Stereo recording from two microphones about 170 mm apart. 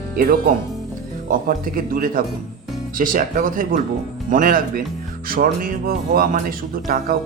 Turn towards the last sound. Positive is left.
turn(degrees=-55)  # may be behind; listen again after turning